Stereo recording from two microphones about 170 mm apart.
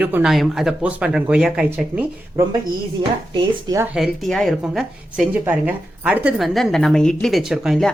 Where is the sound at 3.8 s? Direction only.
5° right (ahead or behind).